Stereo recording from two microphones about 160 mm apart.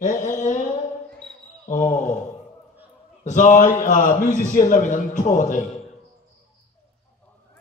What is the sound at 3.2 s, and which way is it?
A man's voice, 50° left (ahead or behind).